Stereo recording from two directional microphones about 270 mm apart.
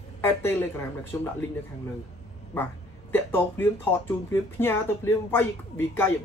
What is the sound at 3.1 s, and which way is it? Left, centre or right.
Speech, centre.